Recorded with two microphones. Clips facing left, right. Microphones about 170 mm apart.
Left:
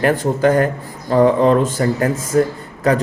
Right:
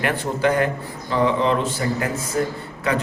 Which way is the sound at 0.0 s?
45° left (ahead or behind).